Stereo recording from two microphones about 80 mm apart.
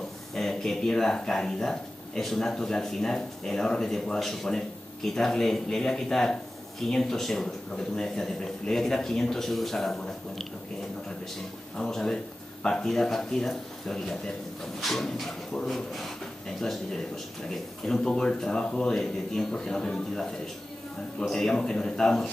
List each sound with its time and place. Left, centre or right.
0.3 s speech: centre
11.7 s speech: centre
17.8 s speech: centre